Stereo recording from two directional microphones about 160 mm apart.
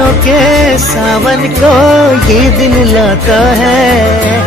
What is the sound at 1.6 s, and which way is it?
Music, 5° right (ahead or behind).